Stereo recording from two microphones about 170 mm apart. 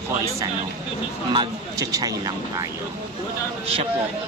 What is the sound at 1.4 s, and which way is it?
Speech, 20° right (ahead or behind).